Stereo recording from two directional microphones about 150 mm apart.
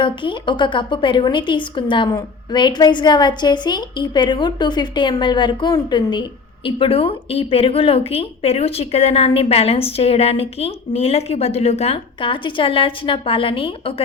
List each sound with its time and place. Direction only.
0.0 s a woman's voice: 35° left (ahead or behind)